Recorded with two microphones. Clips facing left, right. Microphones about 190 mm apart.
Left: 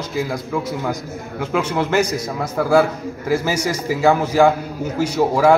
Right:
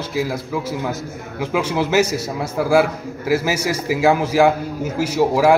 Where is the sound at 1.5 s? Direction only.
10° right (ahead or behind).